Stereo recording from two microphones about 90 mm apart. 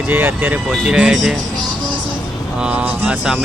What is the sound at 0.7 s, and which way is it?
Speech, 10° right (ahead or behind).